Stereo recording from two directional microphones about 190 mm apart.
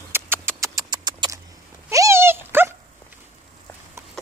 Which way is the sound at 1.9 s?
15° right (ahead or behind).